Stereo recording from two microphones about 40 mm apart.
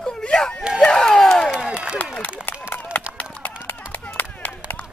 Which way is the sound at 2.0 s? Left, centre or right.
Left.